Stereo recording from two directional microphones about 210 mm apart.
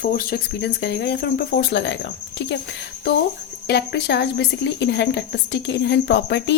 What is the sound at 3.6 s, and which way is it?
A woman's voice, 50° left (ahead or behind).